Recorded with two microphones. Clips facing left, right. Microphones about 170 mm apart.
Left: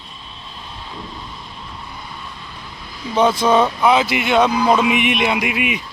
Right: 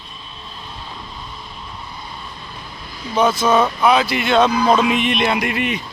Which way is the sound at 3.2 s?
25° left (ahead or behind).